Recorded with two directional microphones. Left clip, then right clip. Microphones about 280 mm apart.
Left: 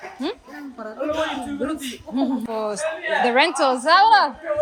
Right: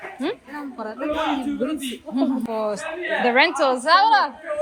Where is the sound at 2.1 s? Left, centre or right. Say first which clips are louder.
Right 1 dB; centre.